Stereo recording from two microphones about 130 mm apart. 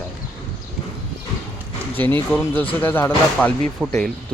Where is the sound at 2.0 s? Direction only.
15° left (ahead or behind).